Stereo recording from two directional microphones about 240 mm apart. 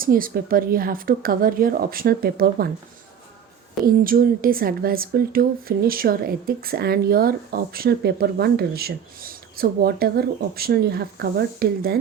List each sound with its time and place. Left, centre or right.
0.0 s a woman's voice: right
3.8 s a woman's voice: right